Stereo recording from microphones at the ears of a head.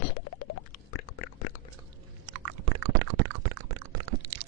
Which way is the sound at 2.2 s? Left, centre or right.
Right.